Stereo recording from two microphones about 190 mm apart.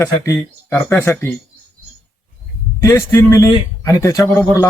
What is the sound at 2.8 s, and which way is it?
Speech, 15° left (ahead or behind).